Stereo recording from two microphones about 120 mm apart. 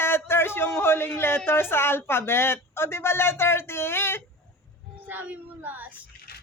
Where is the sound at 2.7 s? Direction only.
20° left (ahead or behind).